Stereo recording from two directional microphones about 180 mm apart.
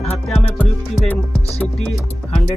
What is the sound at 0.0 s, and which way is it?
Music, 5° left (ahead or behind).